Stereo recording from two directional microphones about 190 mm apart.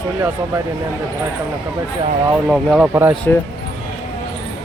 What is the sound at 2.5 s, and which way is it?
Speech, 5° right (ahead or behind).